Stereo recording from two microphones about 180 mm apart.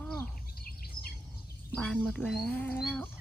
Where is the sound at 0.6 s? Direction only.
55° left (ahead or behind).